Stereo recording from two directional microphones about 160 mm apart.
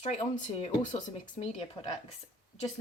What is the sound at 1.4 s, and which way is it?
Speech, 35° left (ahead or behind).